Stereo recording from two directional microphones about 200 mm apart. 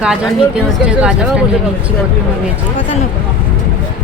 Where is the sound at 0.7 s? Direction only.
5° right (ahead or behind).